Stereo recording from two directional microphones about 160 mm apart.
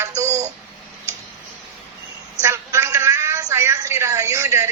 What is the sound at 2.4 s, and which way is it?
A woman's voice, 20° right (ahead or behind).